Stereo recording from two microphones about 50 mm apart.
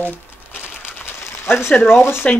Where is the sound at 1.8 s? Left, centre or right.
Left.